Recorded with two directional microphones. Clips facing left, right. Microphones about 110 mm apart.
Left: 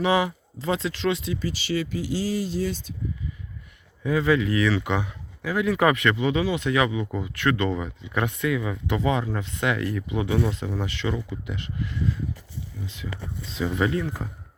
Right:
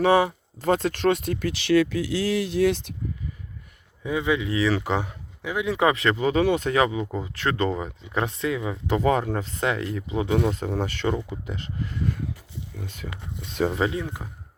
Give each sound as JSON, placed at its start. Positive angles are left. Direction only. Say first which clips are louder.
{"t": 0.6, "sound": "speech", "louder": "right 4 dB", "side_deg": -50}
{"t": 4.0, "sound": "speech", "louder": "left 3 dB", "side_deg": -20}
{"t": 4.7, "sound": "speech", "louder": "right 1 dB", "side_deg": -35}
{"t": 5.4, "sound": "speech", "louder": "left 1 dB", "side_deg": -20}
{"t": 9.0, "sound": "speech", "louder": "right 3 dB", "side_deg": -45}
{"t": 10.5, "sound": "speech", "louder": "right 3 dB", "side_deg": -45}
{"t": 12.8, "sound": "speech", "louder": "even", "side_deg": -50}
{"t": 13.7, "sound": "speech", "louder": "left 1 dB", "side_deg": -30}
{"t": 13.9, "sound": "speech", "louder": "left 3 dB", "side_deg": -20}